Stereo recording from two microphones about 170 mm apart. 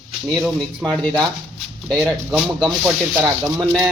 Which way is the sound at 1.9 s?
Centre (ahead or behind).